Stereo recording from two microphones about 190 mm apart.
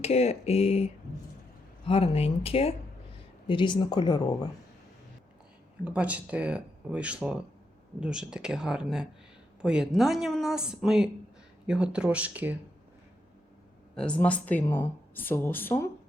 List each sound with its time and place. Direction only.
0.0 s speech: 35° left (ahead or behind)
1.9 s speech: 30° left (ahead or behind)
5.8 s speech: 5° right (ahead or behind)
13.9 s speech: 5° left (ahead or behind)